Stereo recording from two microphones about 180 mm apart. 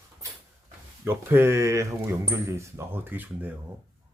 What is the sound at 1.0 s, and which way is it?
Speech, 15° right (ahead or behind).